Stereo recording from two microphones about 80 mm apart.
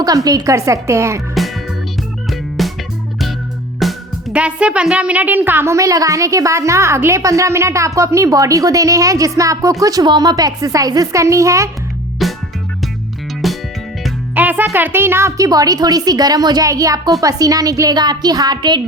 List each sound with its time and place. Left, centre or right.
0.0 s a woman's voice: right
2.3 s music: centre
3.8 s music: centre
4.3 s a child's voice: centre
5.7 s a woman's voice: right
12.2 s music: centre
13.4 s music: centre
14.3 s speech: right
15.4 s a woman's voice: right